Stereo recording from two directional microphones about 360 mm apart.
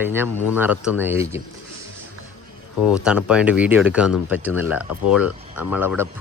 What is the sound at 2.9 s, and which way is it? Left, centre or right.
Speech, centre.